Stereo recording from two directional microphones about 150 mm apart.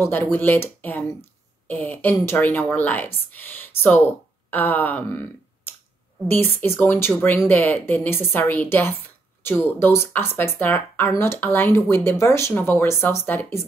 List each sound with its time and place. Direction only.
0.0 s speech: 15° left (ahead or behind)
6.2 s speech: 15° left (ahead or behind)